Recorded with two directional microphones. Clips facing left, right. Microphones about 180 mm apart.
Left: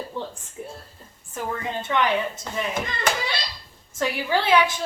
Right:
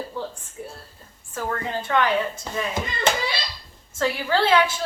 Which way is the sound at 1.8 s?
20° left (ahead or behind).